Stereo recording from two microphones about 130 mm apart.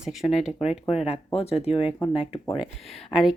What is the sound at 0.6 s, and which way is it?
Speech, 55° left (ahead or behind).